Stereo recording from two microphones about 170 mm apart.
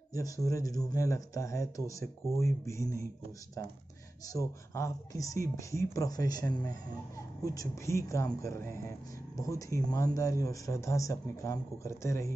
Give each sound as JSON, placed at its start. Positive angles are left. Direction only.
{"t": 0.1, "sound": "speech", "side_deg": 20}
{"t": 4.3, "sound": "speech", "side_deg": 20}